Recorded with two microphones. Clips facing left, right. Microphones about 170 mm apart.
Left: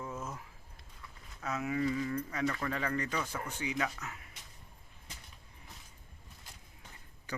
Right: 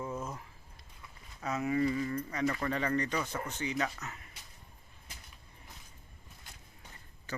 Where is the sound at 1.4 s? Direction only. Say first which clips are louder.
Right 3 dB; centre (ahead or behind).